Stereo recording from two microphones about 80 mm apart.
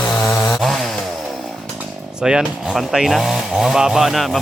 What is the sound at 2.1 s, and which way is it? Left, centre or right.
Speech, centre.